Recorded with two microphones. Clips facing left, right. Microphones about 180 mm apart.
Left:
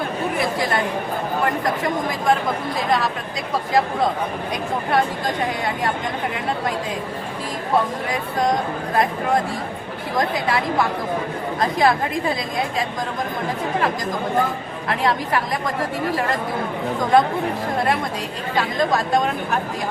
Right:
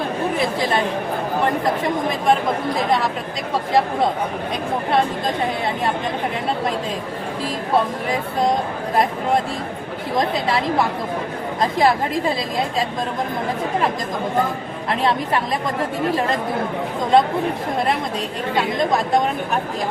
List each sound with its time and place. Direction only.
1.6 s a woman's voice: 25° right (ahead or behind)
8.1 s a woman's voice: 25° right (ahead or behind)
10.2 s a woman's voice: 25° right (ahead or behind)
11.6 s a woman's voice: 25° right (ahead or behind)
14.8 s a woman's voice: 25° right (ahead or behind)
17.0 s a woman's voice: 25° right (ahead or behind)
18.5 s a woman's voice: 20° right (ahead or behind)